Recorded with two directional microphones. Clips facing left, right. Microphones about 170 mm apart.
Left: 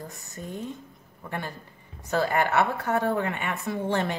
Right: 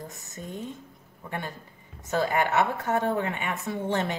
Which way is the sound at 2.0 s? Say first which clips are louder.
Left 1 dB; 20° right (ahead or behind).